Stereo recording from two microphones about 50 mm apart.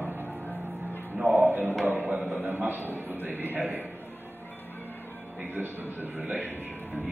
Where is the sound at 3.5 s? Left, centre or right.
Right.